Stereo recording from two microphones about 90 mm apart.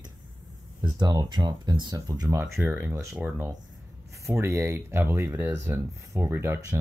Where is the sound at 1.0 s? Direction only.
50° right (ahead or behind).